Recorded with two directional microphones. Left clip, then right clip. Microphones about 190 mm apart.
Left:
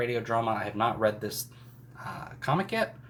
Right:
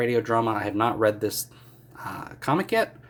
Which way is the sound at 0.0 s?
55° right (ahead or behind).